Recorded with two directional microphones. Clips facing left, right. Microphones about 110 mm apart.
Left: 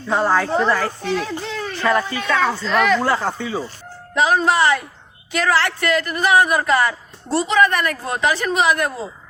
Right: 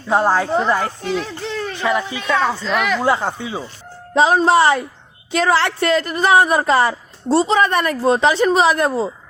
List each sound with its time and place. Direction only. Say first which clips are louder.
0.1 s speech: right 2 dB; 25° right (ahead or behind)
1.0 s speech: even; 5° right (ahead or behind)
1.4 s a sound: right 2 dB; centre (ahead or behind)
1.7 s speech: left 2 dB; 15° right (ahead or behind)
3.0 s speech: right 2 dB; 20° right (ahead or behind)
4.1 s speech: right 4 dB; 30° right (ahead or behind)